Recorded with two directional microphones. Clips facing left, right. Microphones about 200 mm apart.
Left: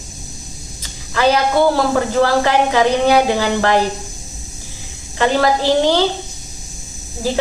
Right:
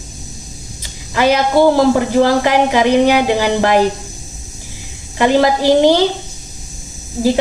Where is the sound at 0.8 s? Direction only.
15° right (ahead or behind).